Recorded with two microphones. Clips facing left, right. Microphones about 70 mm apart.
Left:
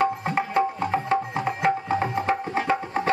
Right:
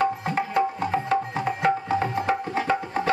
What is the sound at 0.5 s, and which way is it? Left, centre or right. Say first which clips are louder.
Music: even; left.